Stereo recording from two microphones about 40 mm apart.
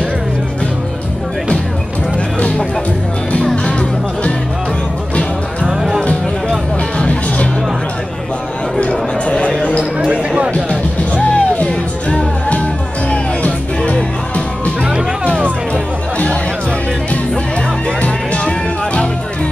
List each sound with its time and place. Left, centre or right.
5.7 s music: centre
7.0 s music: left
8.7 s chatter: left
9.9 s basketball bounce: right
10.5 s music: left
18.0 s music: left